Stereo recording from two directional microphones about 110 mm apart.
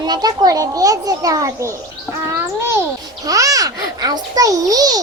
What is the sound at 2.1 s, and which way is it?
Babbling, 20° right (ahead or behind).